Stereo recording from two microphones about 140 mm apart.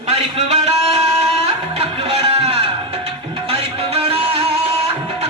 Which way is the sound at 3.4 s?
45° right (ahead or behind).